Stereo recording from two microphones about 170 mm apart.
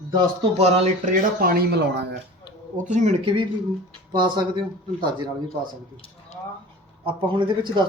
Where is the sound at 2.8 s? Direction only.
45° right (ahead or behind); by 4.7 s 25° right (ahead or behind).